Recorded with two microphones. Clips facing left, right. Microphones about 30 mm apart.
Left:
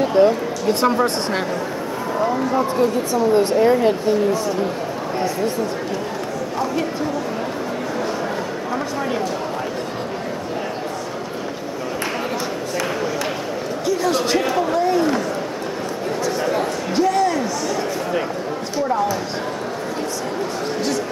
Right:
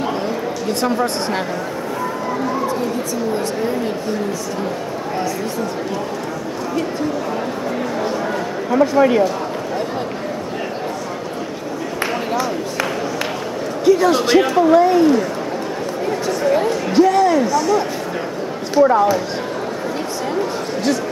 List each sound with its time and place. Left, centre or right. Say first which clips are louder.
0.1 s a woman's voice: left 6 dB; centre
3.3 s speech: left 5 dB; left
8.9 s speech: right 12 dB; right
13.8 s speech: right 6 dB; centre
16.3 s chatter: right 4 dB; centre
16.9 s a woman's voice: right 5 dB; centre
18.9 s speech: right 2 dB; right